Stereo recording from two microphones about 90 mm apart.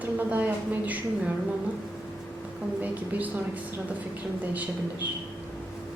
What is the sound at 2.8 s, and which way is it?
Speech, 20° right (ahead or behind).